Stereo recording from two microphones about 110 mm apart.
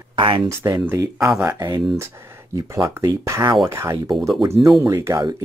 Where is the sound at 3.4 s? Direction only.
45° right (ahead or behind).